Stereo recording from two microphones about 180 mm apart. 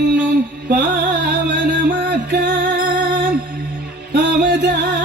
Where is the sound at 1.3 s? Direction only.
55° right (ahead or behind).